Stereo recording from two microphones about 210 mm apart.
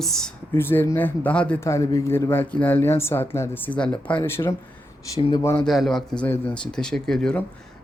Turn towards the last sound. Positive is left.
turn(degrees=5)  # may be behind; listen again after turning